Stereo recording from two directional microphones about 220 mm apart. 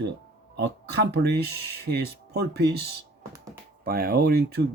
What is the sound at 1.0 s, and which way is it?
Speech, 50° right (ahead or behind).